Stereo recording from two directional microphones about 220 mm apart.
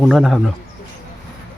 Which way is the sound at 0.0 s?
Centre (ahead or behind).